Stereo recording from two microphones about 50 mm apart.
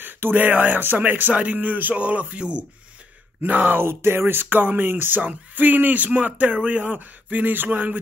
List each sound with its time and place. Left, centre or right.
0.0 s speech: right
3.4 s speech: right
3.8 s speech: right